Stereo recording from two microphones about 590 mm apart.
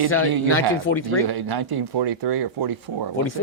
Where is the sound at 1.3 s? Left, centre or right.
Right.